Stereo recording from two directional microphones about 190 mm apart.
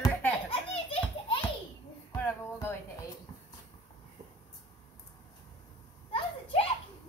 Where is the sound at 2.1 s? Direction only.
15° left (ahead or behind).